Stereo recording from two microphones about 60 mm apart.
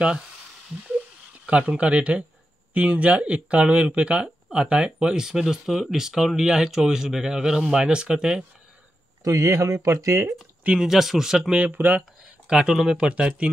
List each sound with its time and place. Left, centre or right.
1.4 s speech: centre
9.2 s speech: right
10.2 s speech: centre
10.9 s speech: centre
11.5 s speech: right
12.4 s speech: centre
13.1 s speech: centre